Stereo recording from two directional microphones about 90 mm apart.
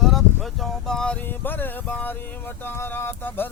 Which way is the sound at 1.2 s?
20° left (ahead or behind).